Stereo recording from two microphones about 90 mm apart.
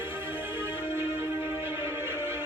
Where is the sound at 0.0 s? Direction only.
25° right (ahead or behind).